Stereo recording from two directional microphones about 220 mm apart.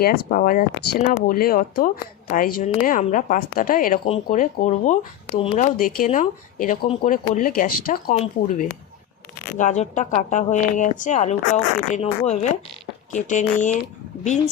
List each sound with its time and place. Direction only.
0.0 s speech: 45° left (ahead or behind)
9.5 s speech: 35° left (ahead or behind)